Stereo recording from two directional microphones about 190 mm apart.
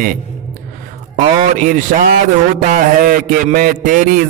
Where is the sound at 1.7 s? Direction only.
45° right (ahead or behind).